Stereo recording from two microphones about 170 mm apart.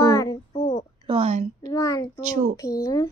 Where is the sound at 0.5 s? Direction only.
50° left (ahead or behind).